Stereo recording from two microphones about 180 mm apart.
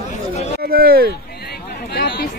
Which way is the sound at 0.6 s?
55° right (ahead or behind).